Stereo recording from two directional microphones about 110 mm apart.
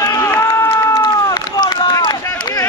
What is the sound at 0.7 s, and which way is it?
Run, 30° left (ahead or behind).